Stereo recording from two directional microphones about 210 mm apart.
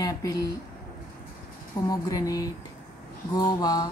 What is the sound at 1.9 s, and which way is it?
A woman's voice, 15° left (ahead or behind).